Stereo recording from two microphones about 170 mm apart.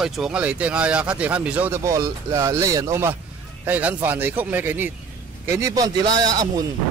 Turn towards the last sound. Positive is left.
turn(degrees=-20)  # may be behind; listen again after turning